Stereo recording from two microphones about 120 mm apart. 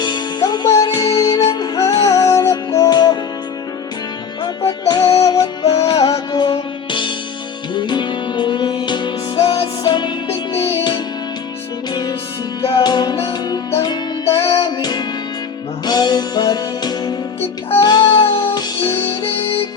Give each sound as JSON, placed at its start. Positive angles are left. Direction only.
{"t": 0.0, "sound": "music", "side_deg": 40}
{"t": 4.9, "sound": "music", "side_deg": 35}
{"t": 10.2, "sound": "music", "side_deg": 50}
{"t": 12.6, "sound": "music", "side_deg": 40}